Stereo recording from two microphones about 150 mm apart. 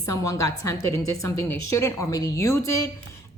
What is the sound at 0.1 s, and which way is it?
A woman's voice, 20° left (ahead or behind).